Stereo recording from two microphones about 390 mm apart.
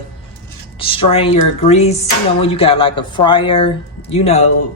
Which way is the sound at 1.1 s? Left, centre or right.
Centre.